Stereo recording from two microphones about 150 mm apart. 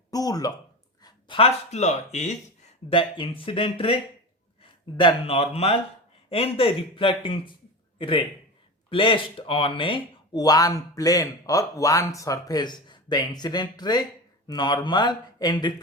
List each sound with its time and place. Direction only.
0.1 s speech: 25° left (ahead or behind)
1.0 s speech: 35° left (ahead or behind)
2.9 s a man's voice: 35° left (ahead or behind)